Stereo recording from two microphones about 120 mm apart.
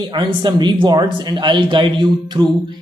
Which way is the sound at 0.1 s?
40° right (ahead or behind).